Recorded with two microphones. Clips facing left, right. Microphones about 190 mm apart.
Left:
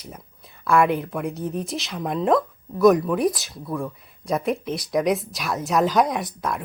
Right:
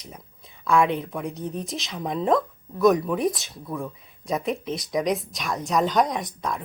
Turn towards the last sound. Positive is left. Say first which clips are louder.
# left 2 dB
turn(degrees=5)  # may be behind; listen again after turning